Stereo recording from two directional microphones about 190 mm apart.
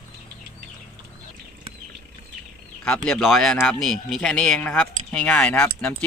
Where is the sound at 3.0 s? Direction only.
5° left (ahead or behind).